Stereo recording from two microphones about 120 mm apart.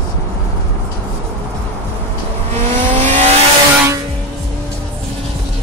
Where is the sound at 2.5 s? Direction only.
90° right.